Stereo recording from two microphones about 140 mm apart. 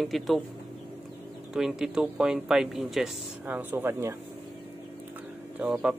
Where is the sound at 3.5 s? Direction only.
15° right (ahead or behind).